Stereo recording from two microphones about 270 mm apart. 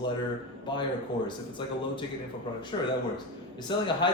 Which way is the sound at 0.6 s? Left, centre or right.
Centre.